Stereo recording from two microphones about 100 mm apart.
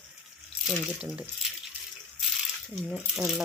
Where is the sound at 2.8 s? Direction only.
5° right (ahead or behind).